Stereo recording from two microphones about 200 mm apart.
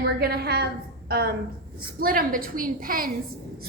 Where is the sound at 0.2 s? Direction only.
50° right (ahead or behind).